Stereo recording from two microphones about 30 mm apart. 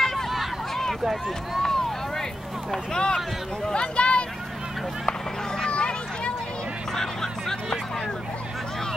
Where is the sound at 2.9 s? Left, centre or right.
Left.